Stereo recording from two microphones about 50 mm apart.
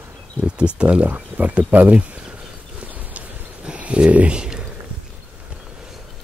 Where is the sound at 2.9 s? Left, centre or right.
Right; by 4.7 s centre.